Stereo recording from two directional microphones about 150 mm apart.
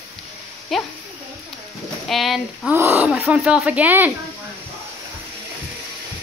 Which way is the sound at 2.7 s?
15° right (ahead or behind).